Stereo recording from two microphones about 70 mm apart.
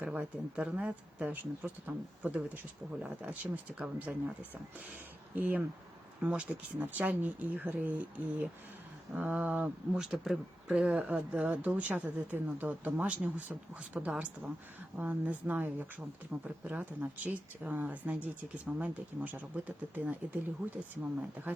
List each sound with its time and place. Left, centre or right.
0.0 s speech: centre
5.3 s speech: right
10.0 s speech: centre
10.7 s speech: centre